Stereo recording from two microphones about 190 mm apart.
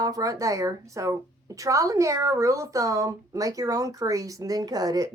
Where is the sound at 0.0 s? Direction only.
20° right (ahead or behind).